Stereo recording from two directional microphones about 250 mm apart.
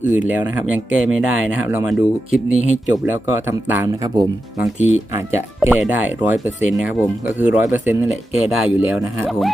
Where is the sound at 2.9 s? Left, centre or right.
Centre.